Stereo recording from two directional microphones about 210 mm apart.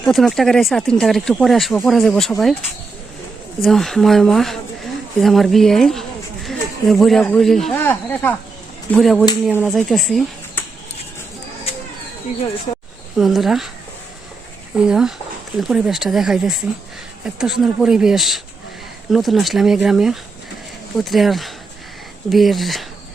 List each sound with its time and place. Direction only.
0.0 s speech: centre (ahead or behind)
3.6 s speech: centre (ahead or behind)
12.7 s a sound: 30° left (ahead or behind)
13.1 s speech: centre (ahead or behind)
14.8 s speech: 5° right (ahead or behind)